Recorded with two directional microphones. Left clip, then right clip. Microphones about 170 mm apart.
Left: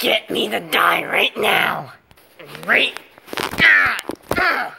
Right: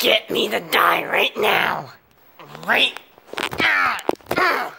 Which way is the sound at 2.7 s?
25° right (ahead or behind).